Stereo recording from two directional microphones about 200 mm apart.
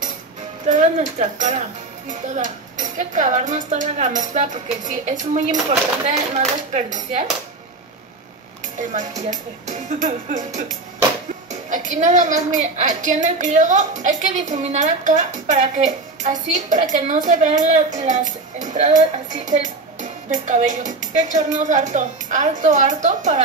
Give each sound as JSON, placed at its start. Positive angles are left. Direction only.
{"t": 0.7, "sound": "a woman's voice", "side_deg": -40}
{"t": 9.3, "sound": "a woman's voice", "side_deg": -40}
{"t": 11.7, "sound": "a woman's voice", "side_deg": -40}